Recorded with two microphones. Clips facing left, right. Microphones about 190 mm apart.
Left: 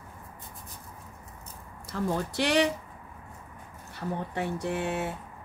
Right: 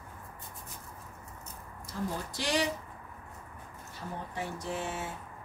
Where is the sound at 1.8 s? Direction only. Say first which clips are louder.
Left 6 dB; 65° left (ahead or behind).